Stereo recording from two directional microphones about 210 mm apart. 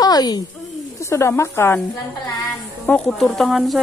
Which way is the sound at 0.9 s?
15° left (ahead or behind).